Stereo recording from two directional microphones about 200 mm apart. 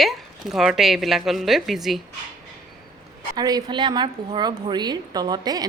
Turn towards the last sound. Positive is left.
turn(degrees=-20)  # may be behind; listen again after turning